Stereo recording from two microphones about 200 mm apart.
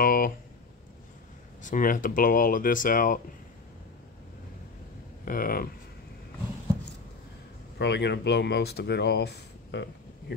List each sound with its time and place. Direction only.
0.0 s a sound: 45° left (ahead or behind)
1.6 s speech: 40° left (ahead or behind)
5.2 s speech: 45° left (ahead or behind)
7.8 s speech: 60° left (ahead or behind)